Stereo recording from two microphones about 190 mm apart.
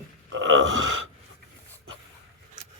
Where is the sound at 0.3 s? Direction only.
80° right.